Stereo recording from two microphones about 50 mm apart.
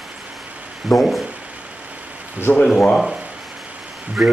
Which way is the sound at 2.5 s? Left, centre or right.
Left.